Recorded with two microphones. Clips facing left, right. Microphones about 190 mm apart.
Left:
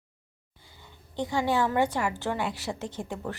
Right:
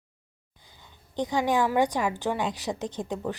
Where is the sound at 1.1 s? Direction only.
15° right (ahead or behind).